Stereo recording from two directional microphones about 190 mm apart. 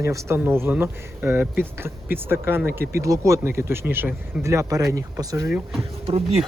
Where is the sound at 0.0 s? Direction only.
15° right (ahead or behind).